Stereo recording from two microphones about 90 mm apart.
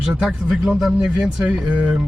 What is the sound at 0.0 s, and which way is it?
Speech, 10° right (ahead or behind).